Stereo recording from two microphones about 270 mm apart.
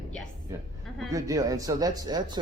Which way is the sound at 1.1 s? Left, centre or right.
Centre.